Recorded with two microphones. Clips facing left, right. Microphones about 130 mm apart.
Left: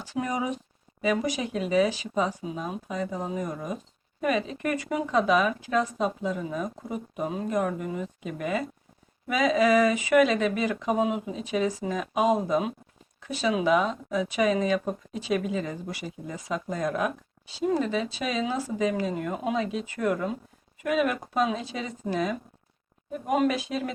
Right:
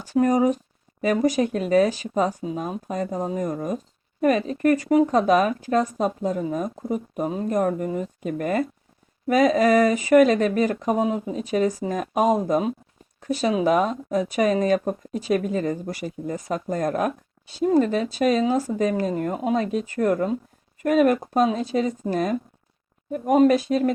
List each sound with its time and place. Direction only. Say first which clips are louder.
0.0 s speech: right 10 dB; 45° right (ahead or behind)